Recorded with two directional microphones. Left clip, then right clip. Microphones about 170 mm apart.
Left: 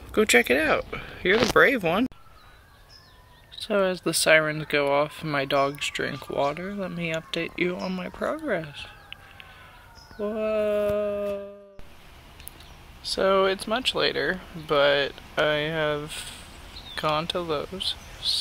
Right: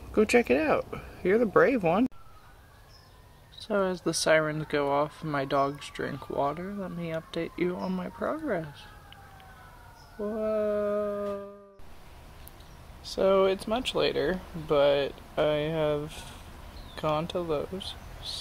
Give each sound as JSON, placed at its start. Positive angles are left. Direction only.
{"t": 0.1, "sound": "speech", "side_deg": 0}
{"t": 3.5, "sound": "speech", "side_deg": 15}
{"t": 10.1, "sound": "speech", "side_deg": 25}
{"t": 13.0, "sound": "speech", "side_deg": 10}